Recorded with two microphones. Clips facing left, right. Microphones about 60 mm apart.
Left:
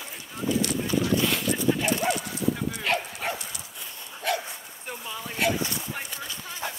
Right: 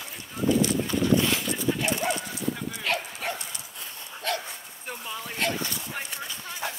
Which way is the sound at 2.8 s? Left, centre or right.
Centre.